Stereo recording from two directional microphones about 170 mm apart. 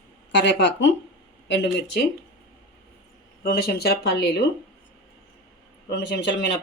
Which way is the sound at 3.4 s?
65° left (ahead or behind).